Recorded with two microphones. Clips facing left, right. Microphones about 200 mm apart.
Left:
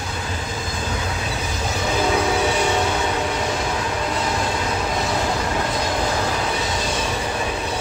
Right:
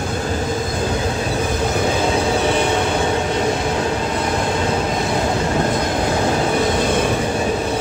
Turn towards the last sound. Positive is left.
turn(degrees=-55)  # may be behind; listen again after turning